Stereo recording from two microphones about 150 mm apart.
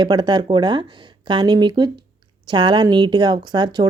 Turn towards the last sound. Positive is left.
turn(degrees=-30)  # may be behind; listen again after turning